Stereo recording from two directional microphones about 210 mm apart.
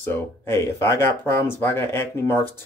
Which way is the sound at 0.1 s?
10° left (ahead or behind).